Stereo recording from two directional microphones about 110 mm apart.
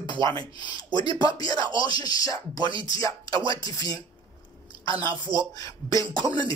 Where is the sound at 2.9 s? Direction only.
35° left (ahead or behind).